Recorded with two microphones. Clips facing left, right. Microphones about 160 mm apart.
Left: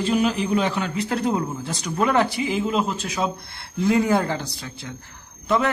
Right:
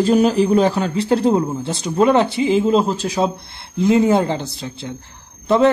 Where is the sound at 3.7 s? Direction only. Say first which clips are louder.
Right 5 dB; 20° right (ahead or behind).